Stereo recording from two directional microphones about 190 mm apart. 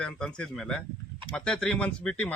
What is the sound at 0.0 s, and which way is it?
A man's voice, 5° left (ahead or behind).